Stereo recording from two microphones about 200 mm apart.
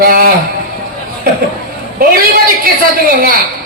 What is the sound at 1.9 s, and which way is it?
A man's voice, 45° right (ahead or behind).